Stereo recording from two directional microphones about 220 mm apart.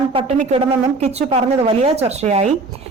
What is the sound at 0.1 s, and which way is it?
A woman's voice, 25° right (ahead or behind).